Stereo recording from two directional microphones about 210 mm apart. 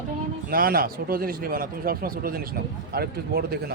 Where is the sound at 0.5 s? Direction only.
45° right (ahead or behind).